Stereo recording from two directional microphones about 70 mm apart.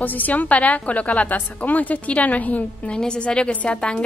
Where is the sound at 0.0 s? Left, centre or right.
Left.